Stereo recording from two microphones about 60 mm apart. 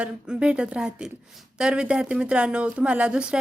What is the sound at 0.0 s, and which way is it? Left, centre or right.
A woman's voice, centre.